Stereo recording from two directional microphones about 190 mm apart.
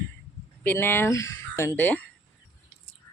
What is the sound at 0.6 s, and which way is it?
Speech, 10° left (ahead or behind).